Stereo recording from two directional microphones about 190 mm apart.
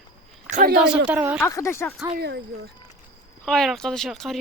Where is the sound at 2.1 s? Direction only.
60° right (ahead or behind).